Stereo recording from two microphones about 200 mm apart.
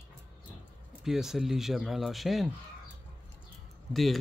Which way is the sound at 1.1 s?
Centre (ahead or behind).